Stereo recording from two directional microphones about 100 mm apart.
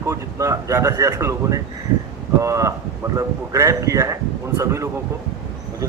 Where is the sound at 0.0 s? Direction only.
30° right (ahead or behind).